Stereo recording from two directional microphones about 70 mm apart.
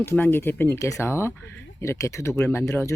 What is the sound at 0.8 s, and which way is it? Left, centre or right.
Speech, left.